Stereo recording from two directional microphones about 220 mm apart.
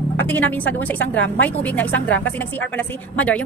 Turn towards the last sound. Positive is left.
turn(degrees=5)  # may be behind; listen again after turning